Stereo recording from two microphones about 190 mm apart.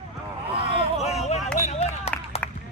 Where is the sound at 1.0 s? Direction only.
35° left (ahead or behind).